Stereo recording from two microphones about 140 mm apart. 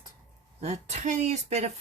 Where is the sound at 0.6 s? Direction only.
50° right (ahead or behind).